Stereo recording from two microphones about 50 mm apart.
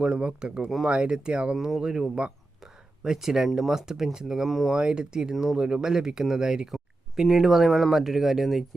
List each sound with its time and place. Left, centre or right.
0.2 s speech: right; by 4.7 s centre
4.7 s speech: centre
6.7 s speech: centre